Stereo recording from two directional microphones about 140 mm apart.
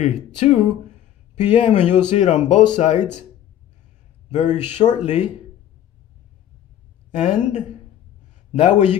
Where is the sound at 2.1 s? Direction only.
55° left (ahead or behind).